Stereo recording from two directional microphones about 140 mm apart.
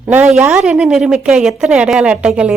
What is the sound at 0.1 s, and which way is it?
A woman's voice, 10° right (ahead or behind).